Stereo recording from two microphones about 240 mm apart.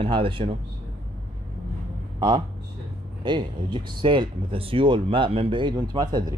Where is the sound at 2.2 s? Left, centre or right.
Centre.